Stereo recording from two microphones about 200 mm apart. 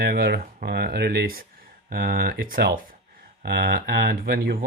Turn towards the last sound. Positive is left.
turn(degrees=-50)  # may be behind; listen again after turning